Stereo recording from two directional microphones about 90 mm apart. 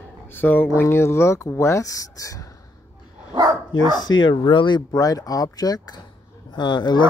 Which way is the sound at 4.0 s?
60° left (ahead or behind).